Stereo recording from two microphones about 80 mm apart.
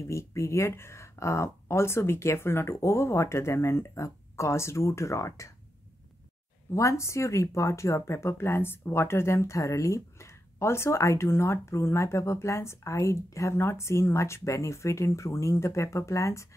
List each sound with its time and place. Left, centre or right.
0.0 s speech: left
6.7 s speech: left